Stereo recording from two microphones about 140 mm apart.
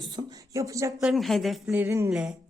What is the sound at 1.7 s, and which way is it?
Speech, 15° right (ahead or behind).